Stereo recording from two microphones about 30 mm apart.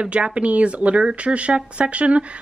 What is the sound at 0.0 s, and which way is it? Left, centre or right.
Speech, right.